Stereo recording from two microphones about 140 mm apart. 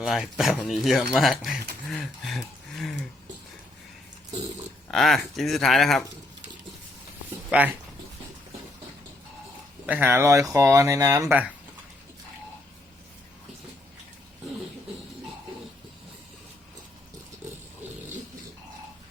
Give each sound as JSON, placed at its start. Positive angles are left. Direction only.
{"t": 0.0, "sound": "speech", "side_deg": -5}
{"t": 4.9, "sound": "speech", "side_deg": 0}
{"t": 9.8, "sound": "speech", "side_deg": -10}